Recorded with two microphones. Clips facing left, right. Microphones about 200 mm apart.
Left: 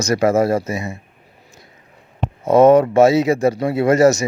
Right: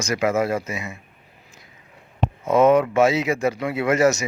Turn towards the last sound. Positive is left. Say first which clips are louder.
# left 5 dB
turn(degrees=40)  # may be behind; listen again after turning